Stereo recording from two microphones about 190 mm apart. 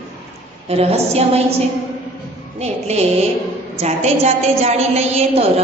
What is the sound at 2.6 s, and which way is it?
A woman's voice, 35° right (ahead or behind).